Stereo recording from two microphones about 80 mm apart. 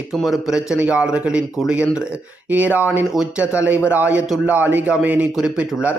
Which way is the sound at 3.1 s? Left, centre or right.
Centre.